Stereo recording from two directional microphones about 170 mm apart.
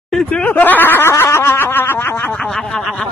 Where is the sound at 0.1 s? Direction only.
5° left (ahead or behind).